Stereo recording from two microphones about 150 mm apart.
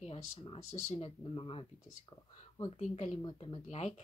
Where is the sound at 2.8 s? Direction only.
50° left (ahead or behind).